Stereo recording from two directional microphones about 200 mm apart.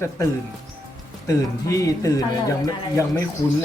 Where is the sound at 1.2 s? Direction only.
15° left (ahead or behind).